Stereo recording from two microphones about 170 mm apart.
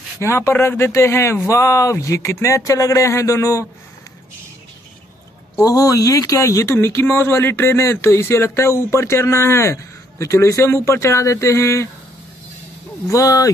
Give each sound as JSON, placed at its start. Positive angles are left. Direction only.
{"t": 0.2, "sound": "speech", "side_deg": 15}
{"t": 5.6, "sound": "speech", "side_deg": 20}
{"t": 13.1, "sound": "speech", "side_deg": 20}